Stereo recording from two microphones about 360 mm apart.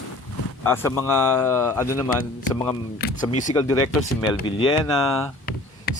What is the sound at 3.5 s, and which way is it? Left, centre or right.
Speech, centre.